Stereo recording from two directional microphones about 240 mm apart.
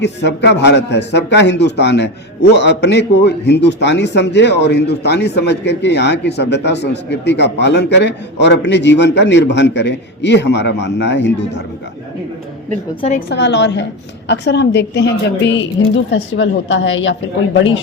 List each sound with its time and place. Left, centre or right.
0.0 s a man's voice: left
13.0 s a woman's voice: left
13.3 s a man's voice: left